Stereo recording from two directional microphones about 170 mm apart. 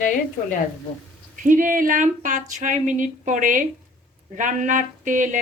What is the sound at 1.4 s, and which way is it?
Speech, 50° right (ahead or behind).